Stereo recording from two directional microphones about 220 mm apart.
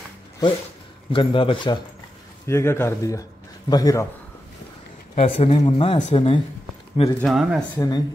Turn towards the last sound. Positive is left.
turn(degrees=15)  # may be behind; listen again after turning